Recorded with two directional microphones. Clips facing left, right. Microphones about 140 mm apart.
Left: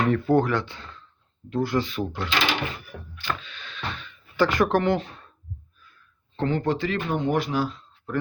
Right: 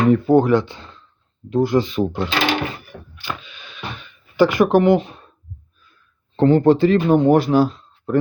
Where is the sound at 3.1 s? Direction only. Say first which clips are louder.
Even; 10° right (ahead or behind).